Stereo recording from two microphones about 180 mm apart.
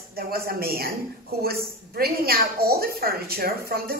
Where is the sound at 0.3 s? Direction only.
60° right (ahead or behind).